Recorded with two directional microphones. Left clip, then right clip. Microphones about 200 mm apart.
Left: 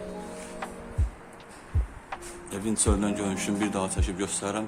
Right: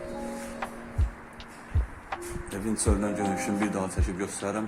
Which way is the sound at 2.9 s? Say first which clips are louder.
Right 2 dB; 10° left (ahead or behind).